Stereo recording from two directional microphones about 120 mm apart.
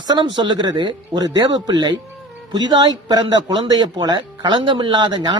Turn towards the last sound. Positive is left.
turn(degrees=-40)  # may be behind; listen again after turning